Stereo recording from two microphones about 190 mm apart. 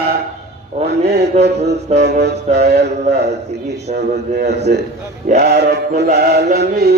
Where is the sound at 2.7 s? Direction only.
60° right (ahead or behind).